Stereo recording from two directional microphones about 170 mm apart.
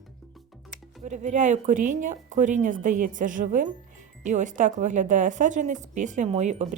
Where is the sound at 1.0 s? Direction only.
45° right (ahead or behind).